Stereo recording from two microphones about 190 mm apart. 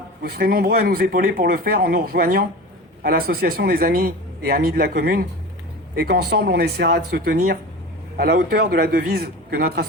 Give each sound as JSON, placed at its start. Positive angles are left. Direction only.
{"t": 0.2, "sound": "speech", "side_deg": -55}